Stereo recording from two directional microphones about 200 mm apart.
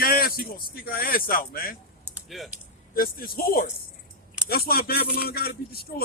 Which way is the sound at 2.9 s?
50° left (ahead or behind).